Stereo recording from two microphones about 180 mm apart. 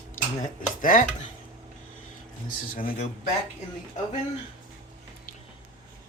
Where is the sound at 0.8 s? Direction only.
50° left (ahead or behind).